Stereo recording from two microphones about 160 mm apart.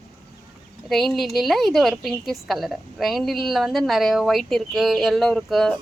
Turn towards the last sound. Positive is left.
turn(degrees=0)  # may be behind; listen again after turning